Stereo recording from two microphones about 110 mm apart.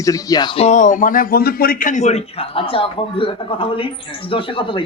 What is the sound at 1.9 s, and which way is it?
Speech, 80° left.